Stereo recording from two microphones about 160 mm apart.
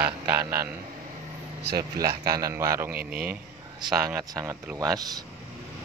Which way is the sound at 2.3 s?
20° right (ahead or behind).